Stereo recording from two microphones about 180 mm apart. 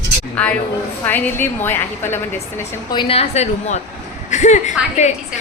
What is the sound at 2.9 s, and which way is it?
Speech, 30° left (ahead or behind).